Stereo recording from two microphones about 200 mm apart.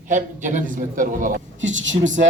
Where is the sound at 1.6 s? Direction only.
70° right (ahead or behind).